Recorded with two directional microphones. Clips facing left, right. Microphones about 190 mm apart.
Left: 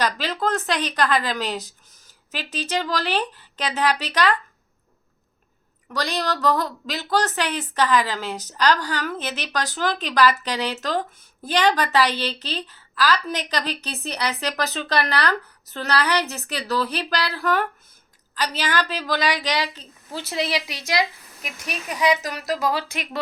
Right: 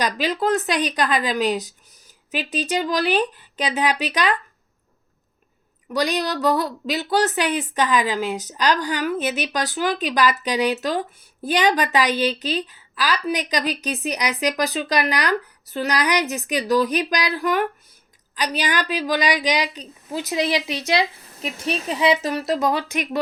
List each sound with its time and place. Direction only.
0.0 s a woman's voice: 15° right (ahead or behind)
5.9 s a woman's voice: 15° right (ahead or behind)